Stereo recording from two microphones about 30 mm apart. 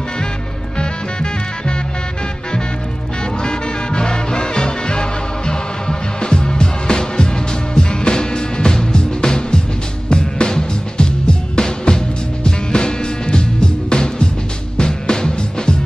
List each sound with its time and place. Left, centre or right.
0.7 s music: left
3.4 s music: left